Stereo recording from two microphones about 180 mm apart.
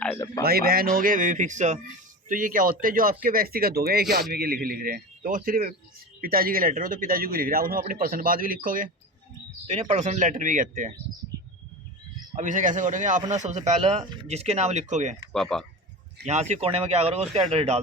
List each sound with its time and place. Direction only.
0.4 s a man's voice: 55° right (ahead or behind)
12.4 s a man's voice: 45° right (ahead or behind)
15.3 s speech: centre (ahead or behind)
16.2 s speech: 40° right (ahead or behind)